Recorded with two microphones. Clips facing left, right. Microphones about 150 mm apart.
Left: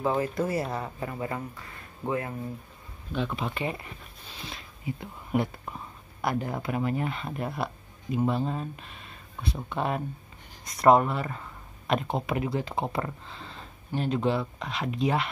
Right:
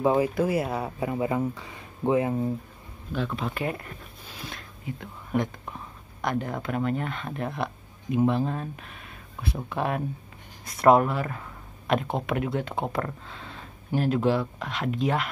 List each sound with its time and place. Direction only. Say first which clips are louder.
0.0 s speech: right 5 dB; 15° right (ahead or behind)
0.3 s speech: right 3 dB; 5° right (ahead or behind); by 2.4 s 20° right (ahead or behind)
3.1 s speech: right 1 dB; centre (ahead or behind)